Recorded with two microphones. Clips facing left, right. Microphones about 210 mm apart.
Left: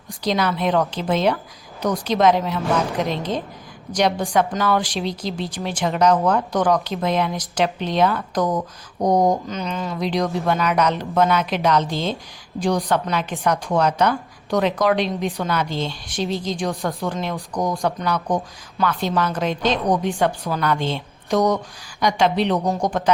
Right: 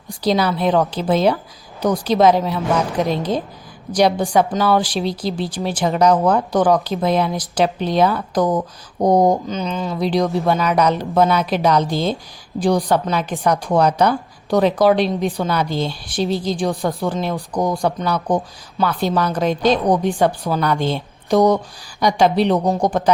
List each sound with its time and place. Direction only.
0.2 s speech: 35° right (ahead or behind)
9.5 s speech: centre (ahead or behind)
9.9 s speech: 35° right (ahead or behind)